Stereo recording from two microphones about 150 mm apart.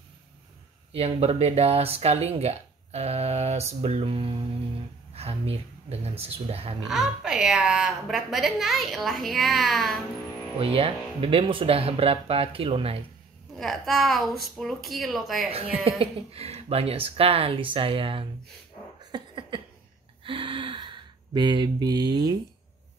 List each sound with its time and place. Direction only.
0.9 s speech: 45° right (ahead or behind)
6.9 s a woman's voice: 5° right (ahead or behind)
10.6 s speech: 40° right (ahead or behind)
13.6 s a woman's voice: centre (ahead or behind)
15.5 s speech: 40° right (ahead or behind)
19.1 s a sound: 35° right (ahead or behind)